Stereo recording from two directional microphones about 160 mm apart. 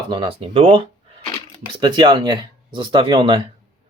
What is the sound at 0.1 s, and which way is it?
Speech, 35° right (ahead or behind).